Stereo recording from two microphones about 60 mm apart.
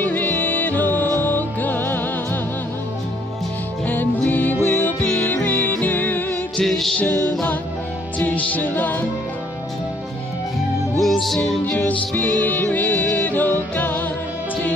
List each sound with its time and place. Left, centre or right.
0.0 s music: left
3.8 s music: left
6.6 s music: centre
7.0 s music: left
11.0 s music: centre
12.2 s music: left